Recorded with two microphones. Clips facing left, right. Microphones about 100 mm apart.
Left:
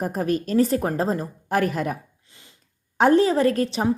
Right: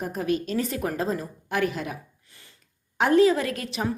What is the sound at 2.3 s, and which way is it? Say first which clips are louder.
Sniff: left 2 dB; 20° left (ahead or behind).